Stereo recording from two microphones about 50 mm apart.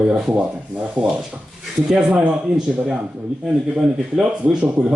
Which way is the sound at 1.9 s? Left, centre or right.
Right.